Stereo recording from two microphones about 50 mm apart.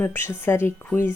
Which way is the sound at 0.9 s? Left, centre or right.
Left.